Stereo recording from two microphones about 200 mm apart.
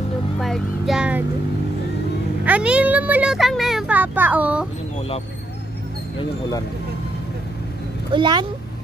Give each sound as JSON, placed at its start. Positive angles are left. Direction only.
{"t": 0.4, "sound": "speech", "side_deg": 0}
{"t": 2.4, "sound": "a child's voice", "side_deg": -5}
{"t": 8.1, "sound": "speech", "side_deg": -25}